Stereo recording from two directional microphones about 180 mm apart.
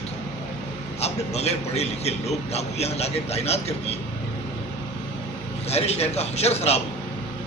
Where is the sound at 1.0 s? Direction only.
35° left (ahead or behind).